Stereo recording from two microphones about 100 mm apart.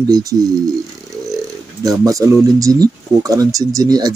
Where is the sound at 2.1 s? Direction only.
35° right (ahead or behind).